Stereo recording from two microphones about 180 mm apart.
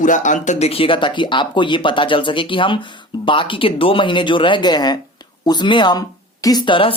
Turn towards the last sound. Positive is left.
turn(degrees=30)  # may be behind; listen again after turning